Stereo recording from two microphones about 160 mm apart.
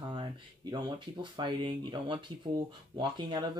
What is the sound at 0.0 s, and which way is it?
Speech, 25° right (ahead or behind).